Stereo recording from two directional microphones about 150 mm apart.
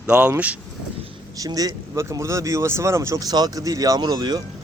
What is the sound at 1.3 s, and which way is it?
Speech, 25° right (ahead or behind).